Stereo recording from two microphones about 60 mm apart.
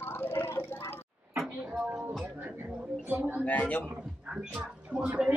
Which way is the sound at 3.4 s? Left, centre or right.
Left.